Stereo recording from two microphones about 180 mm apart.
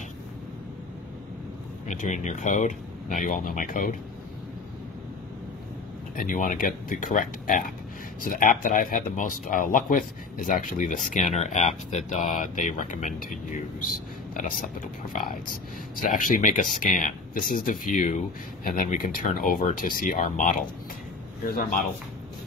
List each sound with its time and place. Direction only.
1.9 s speech: 45° left (ahead or behind)
6.1 s speech: 50° left (ahead or behind)
15.1 s speech: 45° left (ahead or behind)